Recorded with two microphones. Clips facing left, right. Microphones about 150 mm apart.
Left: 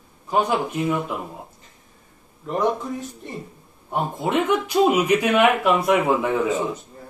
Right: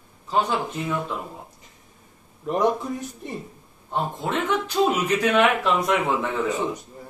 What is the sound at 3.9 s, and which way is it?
Speech, 10° left (ahead or behind).